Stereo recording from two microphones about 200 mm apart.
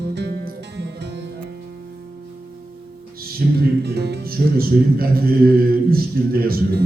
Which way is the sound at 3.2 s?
50° right (ahead or behind).